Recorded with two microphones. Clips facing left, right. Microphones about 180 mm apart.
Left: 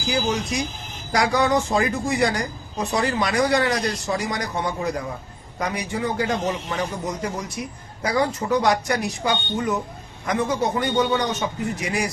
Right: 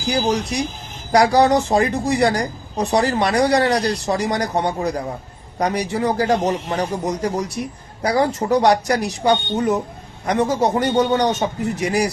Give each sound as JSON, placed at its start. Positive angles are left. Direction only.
{"t": 0.1, "sound": "a woman's voice", "side_deg": -35}